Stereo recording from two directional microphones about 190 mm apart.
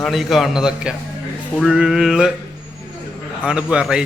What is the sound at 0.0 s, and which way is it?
A man's voice, centre (ahead or behind).